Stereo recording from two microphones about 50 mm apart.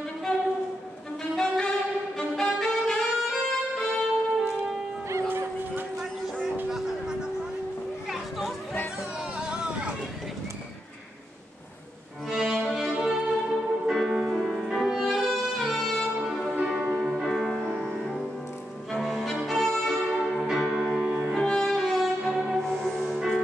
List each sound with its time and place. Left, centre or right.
0.3 s a sound: centre
1.3 s saxophone: centre
2.1 s music: centre
2.9 s saxophone: centre
6.7 s a sound: centre
8.1 s children playing: centre
9.4 s hubbub: centre
12.3 s music: centre
17.2 s music: centre
21.4 s music: centre